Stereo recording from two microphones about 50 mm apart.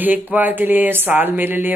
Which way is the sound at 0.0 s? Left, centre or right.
Right.